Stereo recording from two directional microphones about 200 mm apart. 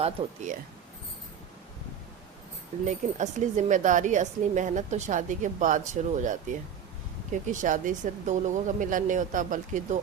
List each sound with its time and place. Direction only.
2.8 s a woman's voice: 35° right (ahead or behind)